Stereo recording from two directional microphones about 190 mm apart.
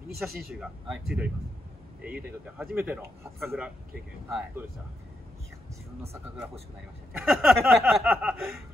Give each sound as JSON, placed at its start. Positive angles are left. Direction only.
{"t": 0.2, "sound": "chuckle", "side_deg": -5}
{"t": 2.0, "sound": "speech", "side_deg": -5}
{"t": 4.3, "sound": "chuckle", "side_deg": -5}
{"t": 7.2, "sound": "chuckle", "side_deg": -5}